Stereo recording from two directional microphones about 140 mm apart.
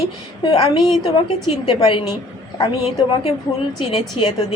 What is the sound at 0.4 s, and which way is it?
Speech, 30° left (ahead or behind).